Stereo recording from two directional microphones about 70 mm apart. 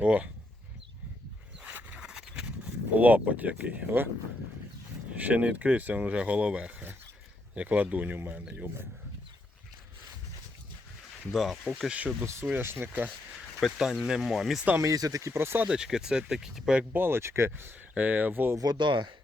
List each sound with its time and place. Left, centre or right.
0.0 s speech: centre
1.6 s a sound: centre
2.9 s speech: right
5.1 s speech: centre
11.3 s speech: centre
11.9 s speech: centre
12.2 s speech: right
13.7 s speech: centre
14.8 s speech: right
15.3 s speech: right
15.6 s speech: centre
16.9 s speech: right
17.7 s speech: right
18.5 s speech: right